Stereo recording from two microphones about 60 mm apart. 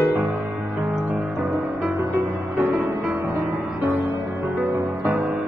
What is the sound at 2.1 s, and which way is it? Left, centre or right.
Music, right.